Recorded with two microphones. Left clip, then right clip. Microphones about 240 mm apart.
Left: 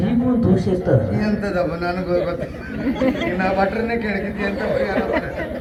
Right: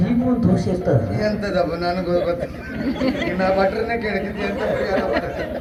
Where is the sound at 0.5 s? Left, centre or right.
Right.